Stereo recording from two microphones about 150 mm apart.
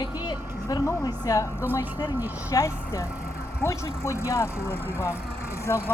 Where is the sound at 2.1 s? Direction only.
10° right (ahead or behind).